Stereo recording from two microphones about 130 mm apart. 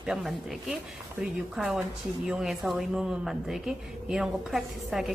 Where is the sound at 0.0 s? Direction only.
Centre (ahead or behind).